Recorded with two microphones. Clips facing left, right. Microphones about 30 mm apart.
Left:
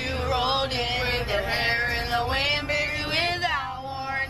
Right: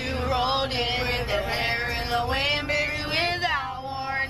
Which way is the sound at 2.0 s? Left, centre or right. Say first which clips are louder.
Even; centre.